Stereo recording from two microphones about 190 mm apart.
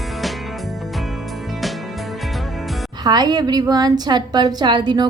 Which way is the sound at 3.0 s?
20° right (ahead or behind).